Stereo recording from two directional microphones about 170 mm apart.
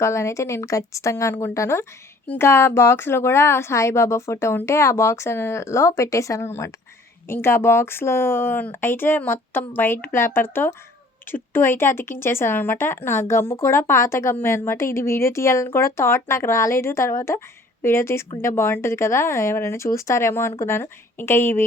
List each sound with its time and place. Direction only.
0.0 s speech: 15° left (ahead or behind)